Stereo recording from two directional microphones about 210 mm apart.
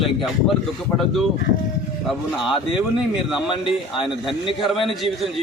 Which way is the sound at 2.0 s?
Centre (ahead or behind).